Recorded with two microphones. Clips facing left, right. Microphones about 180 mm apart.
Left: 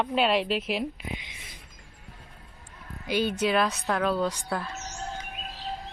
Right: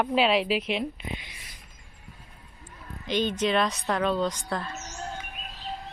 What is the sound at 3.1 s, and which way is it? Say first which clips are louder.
Speech: even; 10° left (ahead or behind).